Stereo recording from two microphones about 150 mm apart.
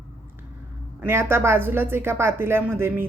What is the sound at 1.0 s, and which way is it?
A woman's voice, 15° right (ahead or behind).